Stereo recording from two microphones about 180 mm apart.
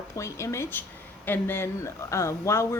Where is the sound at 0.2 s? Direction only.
15° left (ahead or behind).